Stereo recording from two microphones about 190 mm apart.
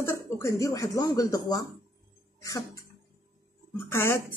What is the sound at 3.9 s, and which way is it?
Speech, 15° left (ahead or behind).